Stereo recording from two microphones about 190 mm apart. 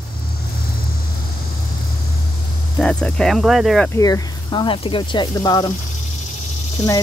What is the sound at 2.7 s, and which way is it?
Speech, 5° left (ahead or behind).